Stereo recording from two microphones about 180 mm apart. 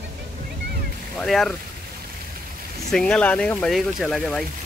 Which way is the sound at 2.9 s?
5° left (ahead or behind).